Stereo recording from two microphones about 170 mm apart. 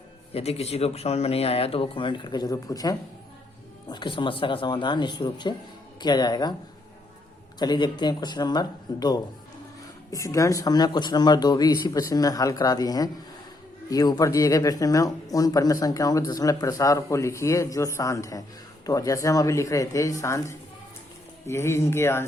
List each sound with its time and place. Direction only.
0.3 s speech: 35° left (ahead or behind)
7.6 s speech: 25° left (ahead or behind)